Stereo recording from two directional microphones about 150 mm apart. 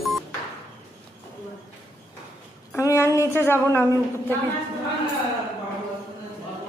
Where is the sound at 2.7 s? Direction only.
20° left (ahead or behind).